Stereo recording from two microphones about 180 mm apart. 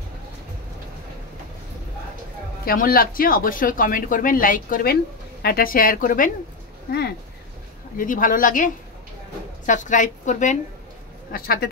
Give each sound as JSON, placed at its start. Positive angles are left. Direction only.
{"t": 2.6, "sound": "speech", "side_deg": 55}
{"t": 6.9, "sound": "speech", "side_deg": 60}
{"t": 8.0, "sound": "speech", "side_deg": 50}
{"t": 11.3, "sound": "speech", "side_deg": 55}